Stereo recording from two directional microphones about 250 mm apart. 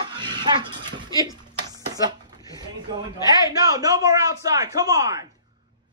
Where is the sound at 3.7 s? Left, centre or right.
Centre.